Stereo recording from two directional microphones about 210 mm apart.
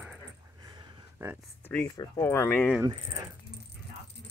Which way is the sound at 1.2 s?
5° right (ahead or behind).